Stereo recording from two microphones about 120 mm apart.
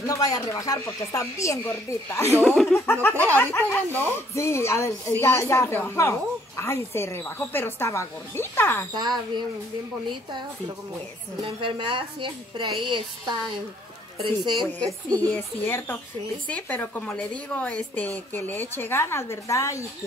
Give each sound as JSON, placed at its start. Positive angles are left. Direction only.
{"t": 0.0, "sound": "speech", "side_deg": 30}
{"t": 2.4, "sound": "speech", "side_deg": 5}
{"t": 2.7, "sound": "speech", "side_deg": 20}
{"t": 8.9, "sound": "speech", "side_deg": -35}
{"t": 11.4, "sound": "a woman's voice", "side_deg": -45}
{"t": 14.4, "sound": "speech", "side_deg": -40}
{"t": 15.1, "sound": "speech", "side_deg": 15}